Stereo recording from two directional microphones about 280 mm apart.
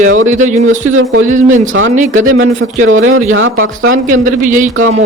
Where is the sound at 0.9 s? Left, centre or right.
Right.